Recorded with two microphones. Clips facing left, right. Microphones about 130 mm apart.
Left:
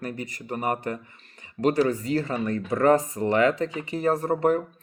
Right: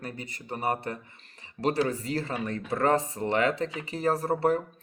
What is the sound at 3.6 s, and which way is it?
Speech, 40° left (ahead or behind).